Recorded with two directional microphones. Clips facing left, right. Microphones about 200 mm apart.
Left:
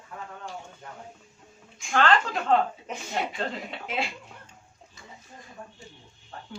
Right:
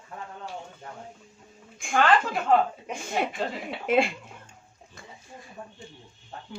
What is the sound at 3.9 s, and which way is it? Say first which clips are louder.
Speech: right 10 dB; 50° right (ahead or behind).